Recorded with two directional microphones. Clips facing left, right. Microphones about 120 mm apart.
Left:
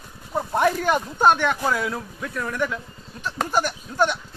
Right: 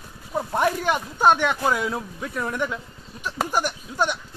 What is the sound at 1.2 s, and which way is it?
Speech, 15° right (ahead or behind).